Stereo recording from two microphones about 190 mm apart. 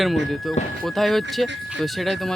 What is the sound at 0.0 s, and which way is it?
Speech, centre (ahead or behind).